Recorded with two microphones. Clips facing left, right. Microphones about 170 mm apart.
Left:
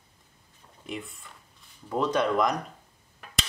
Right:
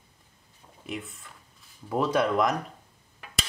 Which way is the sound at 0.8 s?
Centre (ahead or behind).